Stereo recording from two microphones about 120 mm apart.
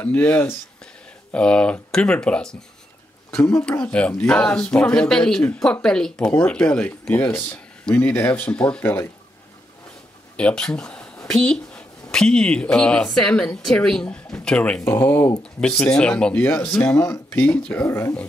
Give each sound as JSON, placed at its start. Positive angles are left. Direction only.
{"t": 0.0, "sound": "a woman's voice", "side_deg": 15}
{"t": 10.3, "sound": "speech", "side_deg": 5}
{"t": 16.7, "sound": "speech", "side_deg": 20}
{"t": 17.3, "sound": "speech", "side_deg": 10}
{"t": 17.8, "sound": "speech", "side_deg": 20}